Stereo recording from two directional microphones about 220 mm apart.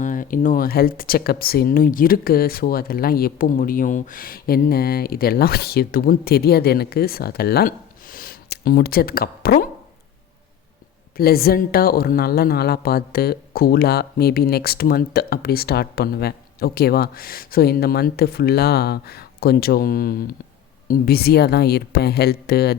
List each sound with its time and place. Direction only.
0.0 s speech: 35° left (ahead or behind)
11.2 s speech: 45° left (ahead or behind)